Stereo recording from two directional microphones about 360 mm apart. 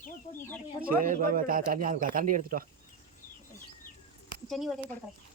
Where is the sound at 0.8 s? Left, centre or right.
Right.